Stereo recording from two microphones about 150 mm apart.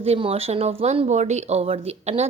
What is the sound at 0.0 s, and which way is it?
Speech, 40° right (ahead or behind).